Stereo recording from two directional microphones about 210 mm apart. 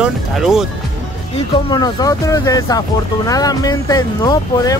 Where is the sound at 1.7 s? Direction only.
20° left (ahead or behind).